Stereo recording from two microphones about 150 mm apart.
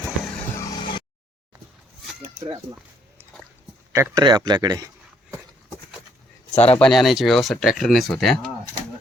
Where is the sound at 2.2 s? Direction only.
30° right (ahead or behind).